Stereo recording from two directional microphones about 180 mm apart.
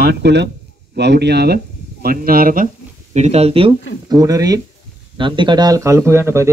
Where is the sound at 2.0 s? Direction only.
55° right (ahead or behind).